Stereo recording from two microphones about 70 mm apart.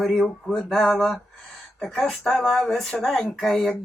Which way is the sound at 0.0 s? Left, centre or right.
Centre.